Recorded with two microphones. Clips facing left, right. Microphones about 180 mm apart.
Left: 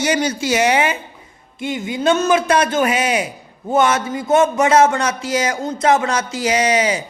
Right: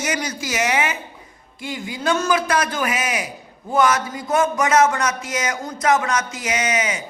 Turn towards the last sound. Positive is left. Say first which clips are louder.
# left 6 dB
turn(degrees=35)  # may be behind; listen again after turning